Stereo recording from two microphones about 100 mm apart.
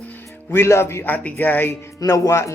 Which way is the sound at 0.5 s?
25° left (ahead or behind).